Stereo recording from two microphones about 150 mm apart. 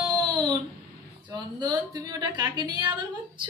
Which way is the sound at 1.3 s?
30° right (ahead or behind).